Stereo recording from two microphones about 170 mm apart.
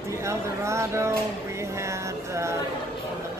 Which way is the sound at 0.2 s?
15° right (ahead or behind).